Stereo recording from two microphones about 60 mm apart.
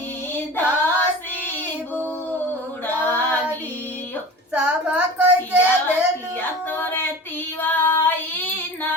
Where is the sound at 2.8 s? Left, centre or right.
Left.